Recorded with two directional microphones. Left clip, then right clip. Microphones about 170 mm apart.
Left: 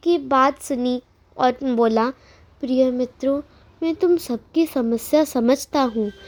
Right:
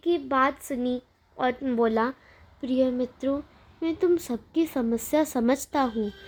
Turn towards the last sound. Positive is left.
turn(degrees=30)  # may be behind; listen again after turning